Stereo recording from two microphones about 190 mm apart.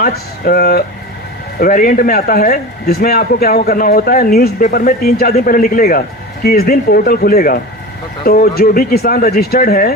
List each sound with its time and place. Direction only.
0.0 s a man's voice: 50° left (ahead or behind)